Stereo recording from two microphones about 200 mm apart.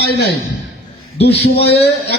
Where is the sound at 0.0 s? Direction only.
60° left (ahead or behind).